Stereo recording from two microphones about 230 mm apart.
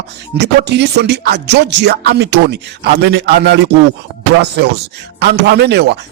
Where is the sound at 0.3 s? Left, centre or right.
Right.